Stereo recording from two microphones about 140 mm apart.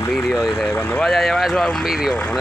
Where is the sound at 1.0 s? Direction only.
Centre (ahead or behind).